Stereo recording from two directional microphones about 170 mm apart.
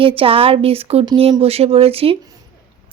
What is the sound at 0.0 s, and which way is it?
Speech, 30° right (ahead or behind).